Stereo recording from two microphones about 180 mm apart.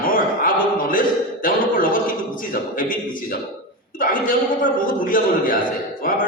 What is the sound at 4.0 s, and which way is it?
A man's voice, 50° left (ahead or behind).